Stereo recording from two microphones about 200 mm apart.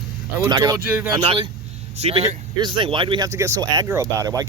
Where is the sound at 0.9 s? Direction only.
10° right (ahead or behind).